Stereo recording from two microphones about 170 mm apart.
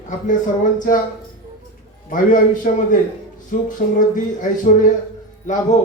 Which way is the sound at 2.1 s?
50° left (ahead or behind).